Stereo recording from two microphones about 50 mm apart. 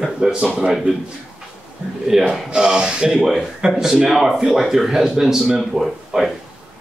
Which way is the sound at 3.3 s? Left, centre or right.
Centre.